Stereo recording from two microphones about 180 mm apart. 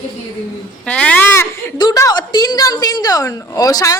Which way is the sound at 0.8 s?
5° left (ahead or behind).